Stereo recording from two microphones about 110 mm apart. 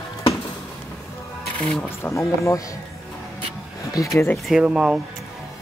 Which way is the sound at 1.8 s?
25° left (ahead or behind).